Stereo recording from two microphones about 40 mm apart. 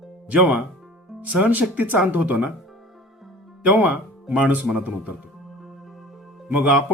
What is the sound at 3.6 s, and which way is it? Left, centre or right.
Speech, right.